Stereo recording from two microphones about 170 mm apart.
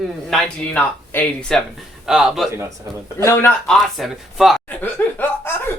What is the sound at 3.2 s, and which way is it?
Speech, 15° left (ahead or behind).